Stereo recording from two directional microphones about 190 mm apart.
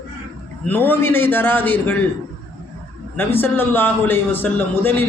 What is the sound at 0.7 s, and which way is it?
Speech, 10° left (ahead or behind).